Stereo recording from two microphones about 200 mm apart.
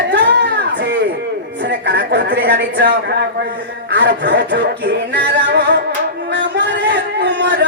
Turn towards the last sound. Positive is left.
turn(degrees=-60)  # may be behind; listen again after turning